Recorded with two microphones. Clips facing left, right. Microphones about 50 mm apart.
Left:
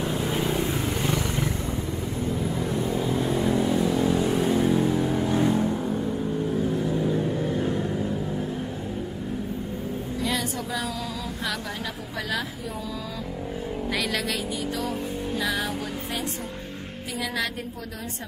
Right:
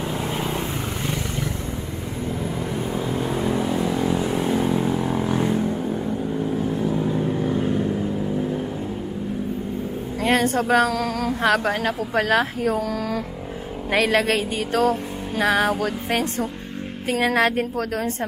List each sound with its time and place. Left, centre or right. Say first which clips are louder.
0.3 s vehicle: even; centre
2.6 s vehicle: even; right; by 5.8 s centre
7.0 s vehicle: right 2 dB; centre
10.2 s a sound: right 11 dB; right
11.4 s music: right 12 dB; right
13.9 s music: right 11 dB; right
17.1 s music: right 10 dB; right